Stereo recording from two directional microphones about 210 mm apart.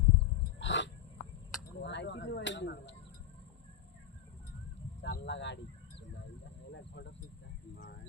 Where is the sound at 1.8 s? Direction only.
55° left (ahead or behind).